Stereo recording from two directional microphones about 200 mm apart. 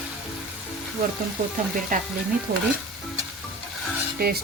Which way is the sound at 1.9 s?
45° right (ahead or behind).